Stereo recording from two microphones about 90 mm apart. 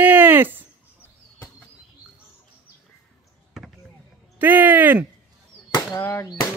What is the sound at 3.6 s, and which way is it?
Basketball bounce, 5° right (ahead or behind).